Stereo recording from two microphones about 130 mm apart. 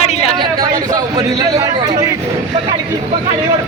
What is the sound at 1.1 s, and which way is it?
Speech, 30° right (ahead or behind).